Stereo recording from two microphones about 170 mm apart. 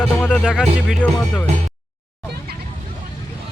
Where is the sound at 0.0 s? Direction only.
5° left (ahead or behind).